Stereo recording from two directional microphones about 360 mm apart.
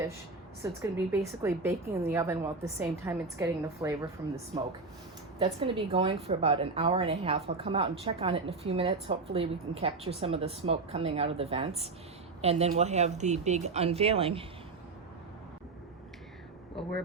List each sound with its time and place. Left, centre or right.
0.6 s speech: centre
5.4 s speech: centre